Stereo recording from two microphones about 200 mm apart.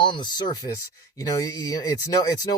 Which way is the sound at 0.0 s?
20° left (ahead or behind).